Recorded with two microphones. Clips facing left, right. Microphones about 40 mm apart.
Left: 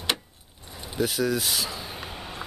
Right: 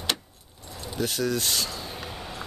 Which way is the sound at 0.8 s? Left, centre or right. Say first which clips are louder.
Left 2 dB; centre.